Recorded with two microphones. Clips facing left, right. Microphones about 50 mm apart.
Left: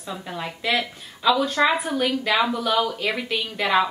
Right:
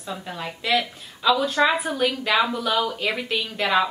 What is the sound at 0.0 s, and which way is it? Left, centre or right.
Speech, centre.